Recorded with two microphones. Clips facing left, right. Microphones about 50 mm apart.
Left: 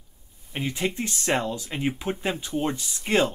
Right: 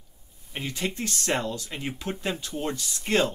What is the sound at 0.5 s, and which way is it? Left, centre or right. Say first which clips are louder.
Speech: left 3 dB; centre.